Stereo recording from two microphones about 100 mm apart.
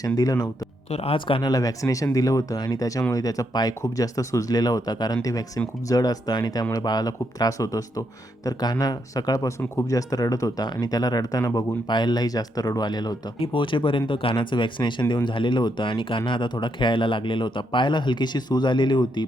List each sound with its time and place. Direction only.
0.2 s speech: 40° left (ahead or behind)
0.9 s speech: 85° left; by 1.5 s 60° left (ahead or behind)
1.5 s speech: 35° left (ahead or behind)
13.4 s speech: 55° left (ahead or behind)